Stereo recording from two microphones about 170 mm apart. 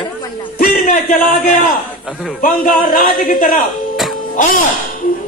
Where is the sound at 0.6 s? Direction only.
60° left (ahead or behind).